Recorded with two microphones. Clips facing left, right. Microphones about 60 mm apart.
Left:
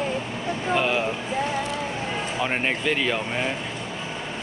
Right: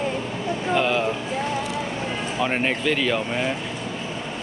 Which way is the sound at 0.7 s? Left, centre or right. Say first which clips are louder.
Right 2 dB; centre.